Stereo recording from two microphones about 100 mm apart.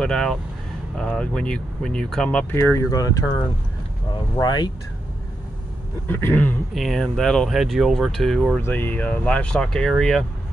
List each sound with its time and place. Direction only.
0.0 s speech: 5° left (ahead or behind)
2.5 s speech: 25° left (ahead or behind)
4.4 s speech: 45° left (ahead or behind)
6.0 s speech: 20° left (ahead or behind)
6.7 s speech: centre (ahead or behind)
8.5 s speech: 20° left (ahead or behind)